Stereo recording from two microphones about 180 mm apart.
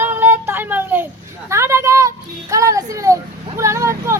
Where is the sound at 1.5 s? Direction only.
15° right (ahead or behind).